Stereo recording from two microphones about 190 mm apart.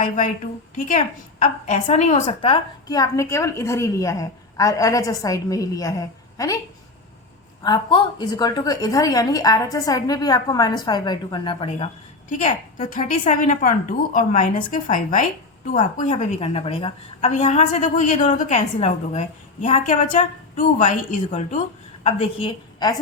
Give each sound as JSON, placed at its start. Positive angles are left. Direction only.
{"t": 0.8, "sound": "a woman's voice", "side_deg": 40}
{"t": 7.6, "sound": "a woman's voice", "side_deg": 25}
{"t": 12.4, "sound": "a woman's voice", "side_deg": 40}
{"t": 22.0, "sound": "a woman's voice", "side_deg": 30}